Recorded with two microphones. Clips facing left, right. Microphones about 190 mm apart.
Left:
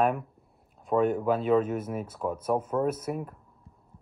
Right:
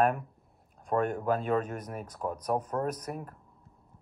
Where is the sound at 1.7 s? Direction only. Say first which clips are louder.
Left 7 dB; 5° left (ahead or behind).